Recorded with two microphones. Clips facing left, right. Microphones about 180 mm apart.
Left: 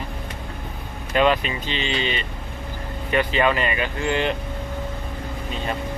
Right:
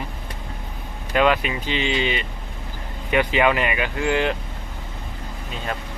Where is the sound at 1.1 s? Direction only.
5° right (ahead or behind).